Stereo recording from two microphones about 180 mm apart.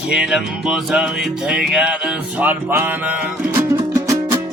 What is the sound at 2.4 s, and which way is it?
Speech, 10° right (ahead or behind).